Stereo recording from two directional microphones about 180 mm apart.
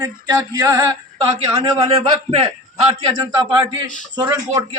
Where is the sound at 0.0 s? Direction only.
20° right (ahead or behind).